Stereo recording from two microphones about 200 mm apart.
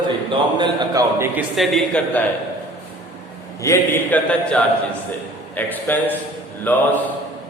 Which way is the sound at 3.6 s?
15° left (ahead or behind).